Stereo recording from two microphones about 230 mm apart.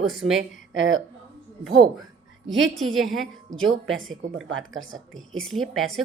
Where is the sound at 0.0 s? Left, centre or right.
Centre.